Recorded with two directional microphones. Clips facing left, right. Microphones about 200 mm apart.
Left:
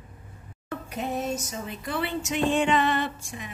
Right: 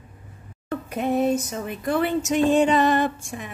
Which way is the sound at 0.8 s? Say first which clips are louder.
Right 8 dB; 55° right (ahead or behind).